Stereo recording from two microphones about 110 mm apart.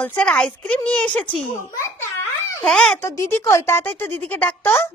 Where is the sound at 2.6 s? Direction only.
5° left (ahead or behind).